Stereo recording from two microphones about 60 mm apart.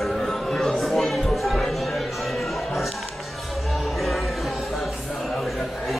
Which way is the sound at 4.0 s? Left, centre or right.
Centre.